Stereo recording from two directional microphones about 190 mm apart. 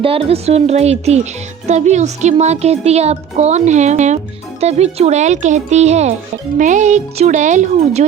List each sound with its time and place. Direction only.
0.0 s speech: 30° right (ahead or behind)